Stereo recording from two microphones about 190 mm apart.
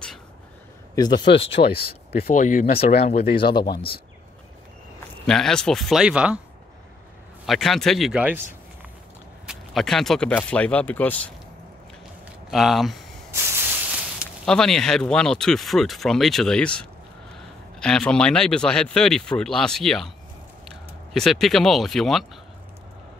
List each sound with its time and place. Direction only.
0.9 s speech: 20° left (ahead or behind)
2.2 s speech: 45° left (ahead or behind); by 3.6 s 25° left (ahead or behind)
3.6 s speech: 55° left (ahead or behind)
5.2 s speech: 5° left (ahead or behind)
7.4 s speech: centre (ahead or behind)
9.5 s speech: centre (ahead or behind)
12.4 s speech: centre (ahead or behind)
13.3 s spray: 10° right (ahead or behind)
14.4 s speech: 5° left (ahead or behind)
21.1 s speech: centre (ahead or behind)